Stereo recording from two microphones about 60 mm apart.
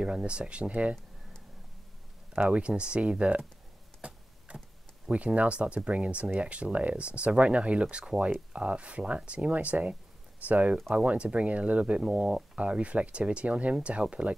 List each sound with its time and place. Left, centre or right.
0.0 s speech: centre
2.5 s speech: centre
4.0 s a sound: centre
5.1 s speech: right